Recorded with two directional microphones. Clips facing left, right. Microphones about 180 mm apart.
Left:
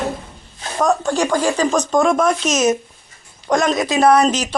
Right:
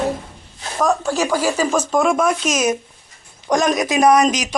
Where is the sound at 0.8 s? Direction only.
Centre (ahead or behind).